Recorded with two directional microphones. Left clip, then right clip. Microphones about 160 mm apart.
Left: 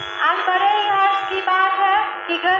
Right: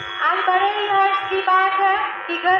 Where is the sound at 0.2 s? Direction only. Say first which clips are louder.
Even; 40° left (ahead or behind).